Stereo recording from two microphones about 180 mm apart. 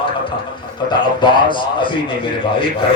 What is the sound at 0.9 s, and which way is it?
A man's voice, 25° left (ahead or behind).